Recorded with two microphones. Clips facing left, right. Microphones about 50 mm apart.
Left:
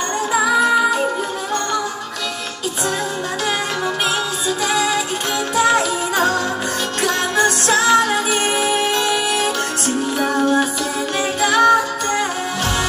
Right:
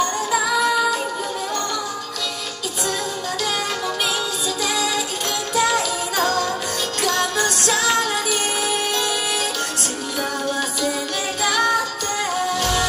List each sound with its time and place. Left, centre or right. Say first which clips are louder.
0.3 s music: left 6 dB; left
4.6 s music: left 5 dB; left